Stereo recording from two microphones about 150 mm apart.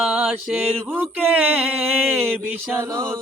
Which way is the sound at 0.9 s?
10° right (ahead or behind).